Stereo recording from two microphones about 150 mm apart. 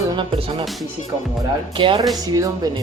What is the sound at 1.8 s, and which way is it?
Speech, 35° right (ahead or behind).